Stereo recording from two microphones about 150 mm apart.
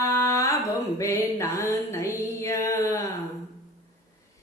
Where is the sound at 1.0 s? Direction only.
20° left (ahead or behind).